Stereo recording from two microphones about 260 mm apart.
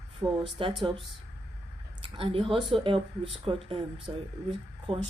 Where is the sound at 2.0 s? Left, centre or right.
Right.